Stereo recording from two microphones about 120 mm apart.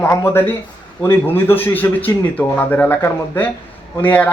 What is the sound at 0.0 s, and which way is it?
A man's voice, 15° left (ahead or behind).